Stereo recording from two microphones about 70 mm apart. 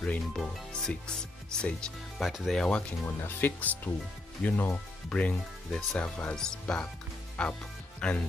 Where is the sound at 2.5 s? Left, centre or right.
Centre.